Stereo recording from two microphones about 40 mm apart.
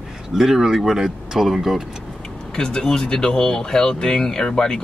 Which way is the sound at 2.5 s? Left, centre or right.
Centre.